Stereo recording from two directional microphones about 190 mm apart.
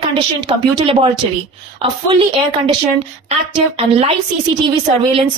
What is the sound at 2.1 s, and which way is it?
A woman's voice, 25° right (ahead or behind).